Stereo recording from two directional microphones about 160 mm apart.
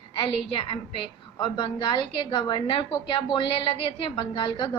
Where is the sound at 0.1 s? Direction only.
35° left (ahead or behind).